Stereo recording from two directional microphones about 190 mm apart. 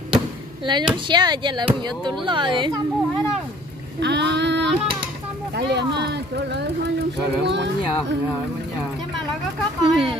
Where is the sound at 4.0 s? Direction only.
65° right (ahead or behind).